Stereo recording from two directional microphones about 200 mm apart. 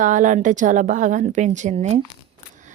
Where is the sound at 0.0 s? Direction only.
40° right (ahead or behind).